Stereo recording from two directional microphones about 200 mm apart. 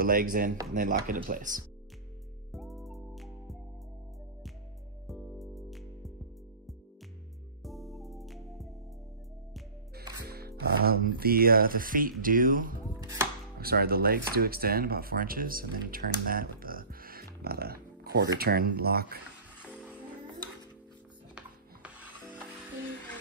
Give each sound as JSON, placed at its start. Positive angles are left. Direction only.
{"t": 0.0, "sound": "speech", "side_deg": -45}
{"t": 2.5, "sound": "music", "side_deg": 0}
{"t": 5.0, "sound": "music", "side_deg": 0}
{"t": 7.6, "sound": "music", "side_deg": 0}
{"t": 10.2, "sound": "speech", "side_deg": -50}
{"t": 13.0, "sound": "chopping", "side_deg": -15}
{"t": 13.6, "sound": "speech", "side_deg": -50}
{"t": 21.4, "sound": "music", "side_deg": -5}